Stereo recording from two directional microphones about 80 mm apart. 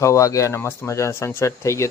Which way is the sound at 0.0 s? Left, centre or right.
Left.